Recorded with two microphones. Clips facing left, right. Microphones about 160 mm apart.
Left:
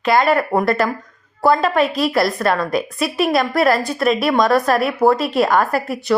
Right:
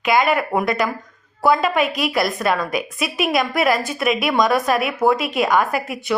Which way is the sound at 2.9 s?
Centre (ahead or behind).